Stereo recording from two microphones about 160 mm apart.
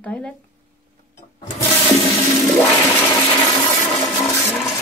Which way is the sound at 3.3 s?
25° left (ahead or behind).